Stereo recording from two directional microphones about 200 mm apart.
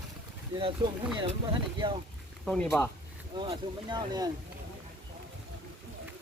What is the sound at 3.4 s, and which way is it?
Speech, 25° right (ahead or behind).